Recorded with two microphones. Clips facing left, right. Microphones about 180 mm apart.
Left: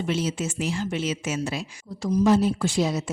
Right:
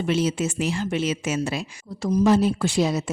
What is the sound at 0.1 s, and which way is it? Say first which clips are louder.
A woman's voice: right 5 dB; 65° right (ahead or behind).